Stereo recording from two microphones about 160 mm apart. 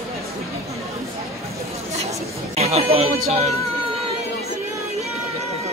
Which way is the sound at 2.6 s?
40° right (ahead or behind).